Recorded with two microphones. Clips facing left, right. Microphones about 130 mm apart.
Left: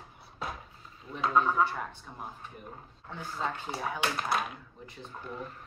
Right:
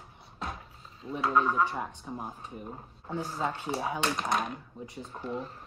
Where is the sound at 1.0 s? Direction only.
35° right (ahead or behind).